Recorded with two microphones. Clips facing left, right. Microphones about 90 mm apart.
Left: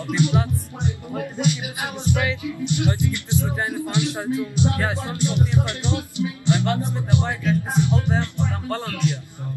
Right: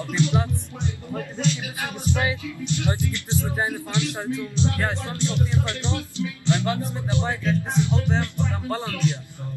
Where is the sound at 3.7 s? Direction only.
20° left (ahead or behind).